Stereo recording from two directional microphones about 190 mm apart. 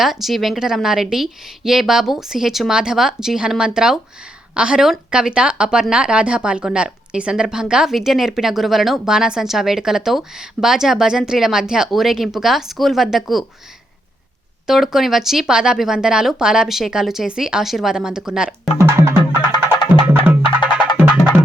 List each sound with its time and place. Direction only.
0.0 s a woman's voice: centre (ahead or behind)
14.7 s a woman's voice: centre (ahead or behind)
18.8 s music: 15° right (ahead or behind)
19.3 s music: 20° left (ahead or behind)